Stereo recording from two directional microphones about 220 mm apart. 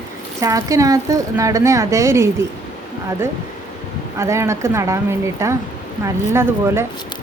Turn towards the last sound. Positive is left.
turn(degrees=-10)  # may be behind; listen again after turning